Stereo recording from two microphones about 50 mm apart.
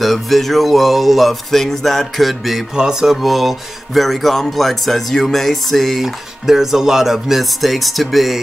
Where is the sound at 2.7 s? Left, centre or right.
Centre.